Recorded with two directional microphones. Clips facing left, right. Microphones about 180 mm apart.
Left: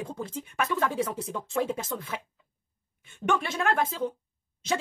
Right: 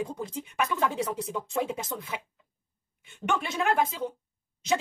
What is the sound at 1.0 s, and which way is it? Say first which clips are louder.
Speech: even; 20° right (ahead or behind).